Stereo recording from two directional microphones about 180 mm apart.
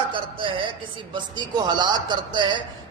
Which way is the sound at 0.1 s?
30° right (ahead or behind).